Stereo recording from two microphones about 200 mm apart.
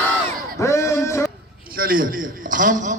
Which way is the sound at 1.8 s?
45° right (ahead or behind).